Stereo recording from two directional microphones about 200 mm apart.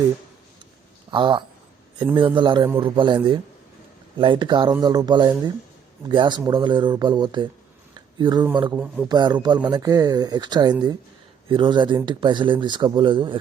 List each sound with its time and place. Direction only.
1.1 s speech: 25° right (ahead or behind)
4.2 s speech: 25° right (ahead or behind)
7.9 s a sound: 20° right (ahead or behind)
8.7 s speech: 10° right (ahead or behind)
9.0 s speech: 20° right (ahead or behind)